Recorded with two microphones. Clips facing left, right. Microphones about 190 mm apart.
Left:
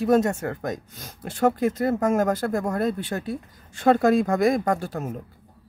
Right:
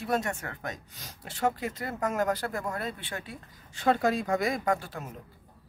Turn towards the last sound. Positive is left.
turn(degrees=45)  # may be behind; listen again after turning